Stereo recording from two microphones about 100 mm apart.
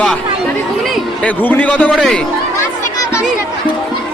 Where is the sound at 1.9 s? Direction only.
Centre (ahead or behind).